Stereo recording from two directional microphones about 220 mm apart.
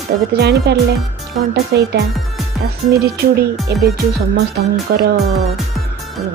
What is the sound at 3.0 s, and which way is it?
Speech, 45° right (ahead or behind).